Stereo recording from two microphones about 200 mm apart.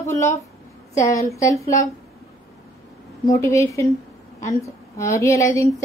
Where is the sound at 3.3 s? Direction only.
15° left (ahead or behind).